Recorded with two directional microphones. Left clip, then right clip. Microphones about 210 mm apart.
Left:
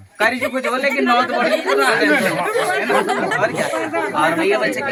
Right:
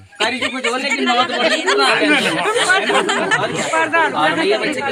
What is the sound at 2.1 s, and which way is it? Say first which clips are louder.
Speech: right 1 dB; 40° left (ahead or behind).